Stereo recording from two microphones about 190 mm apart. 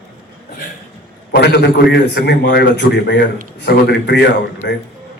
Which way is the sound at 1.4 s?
60° left (ahead or behind).